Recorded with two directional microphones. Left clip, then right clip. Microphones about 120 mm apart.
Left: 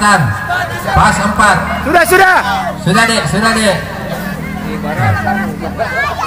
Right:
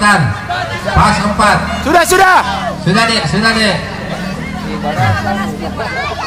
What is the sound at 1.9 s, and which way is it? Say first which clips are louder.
Speech: even; 20° right (ahead or behind).